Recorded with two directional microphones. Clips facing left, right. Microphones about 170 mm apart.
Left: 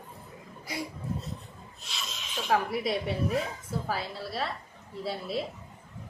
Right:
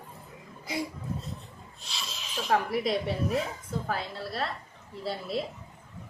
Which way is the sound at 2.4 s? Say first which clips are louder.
Right 1 dB; centre (ahead or behind).